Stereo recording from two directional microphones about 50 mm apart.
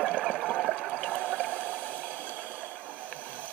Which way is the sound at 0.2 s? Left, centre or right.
Centre.